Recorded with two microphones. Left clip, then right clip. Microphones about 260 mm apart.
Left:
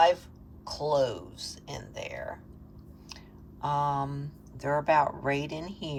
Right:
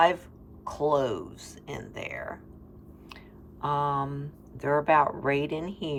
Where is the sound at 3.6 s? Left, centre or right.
Centre.